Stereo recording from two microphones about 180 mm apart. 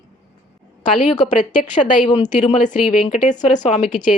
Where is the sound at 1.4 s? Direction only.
45° left (ahead or behind).